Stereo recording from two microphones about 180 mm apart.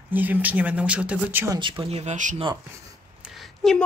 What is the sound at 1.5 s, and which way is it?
Speech, 25° right (ahead or behind).